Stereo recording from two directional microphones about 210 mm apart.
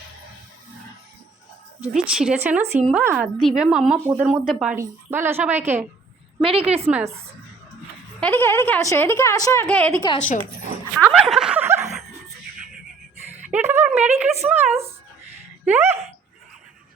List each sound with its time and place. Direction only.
1.8 s a woman's voice: 5° right (ahead or behind)
6.4 s a woman's voice: 25° right (ahead or behind)
6.9 s a woman's voice: 10° right (ahead or behind)
8.2 s a woman's voice: 10° left (ahead or behind)
10.2 s speech: 35° left (ahead or behind)
10.9 s snicker: 5° right (ahead or behind)
13.4 s a woman's voice: 10° right (ahead or behind)
14.7 s a woman's voice: 30° right (ahead or behind)
15.6 s a woman's voice: 10° right (ahead or behind)